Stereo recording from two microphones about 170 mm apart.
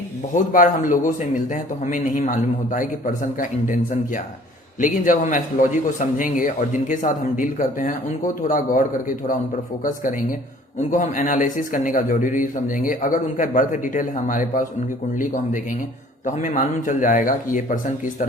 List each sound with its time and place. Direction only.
0.3 s a man's voice: 50° left (ahead or behind)
16.2 s a man's voice: 45° left (ahead or behind)